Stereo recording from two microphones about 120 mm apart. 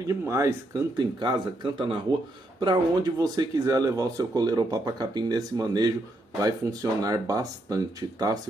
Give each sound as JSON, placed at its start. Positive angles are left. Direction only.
{"t": 0.2, "sound": "speech", "side_deg": -25}
{"t": 0.9, "sound": "speech", "side_deg": -40}